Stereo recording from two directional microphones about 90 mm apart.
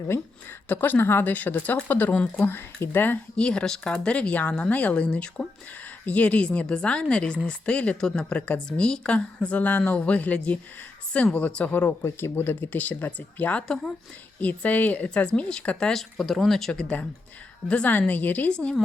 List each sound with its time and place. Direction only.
0.7 s speech: 20° left (ahead or behind)
3.3 s speech: 10° left (ahead or behind)
11.9 s speech: 25° left (ahead or behind); by 13.9 s 5° left (ahead or behind)
14.4 s speech: 15° left (ahead or behind)
17.7 s speech: 15° left (ahead or behind)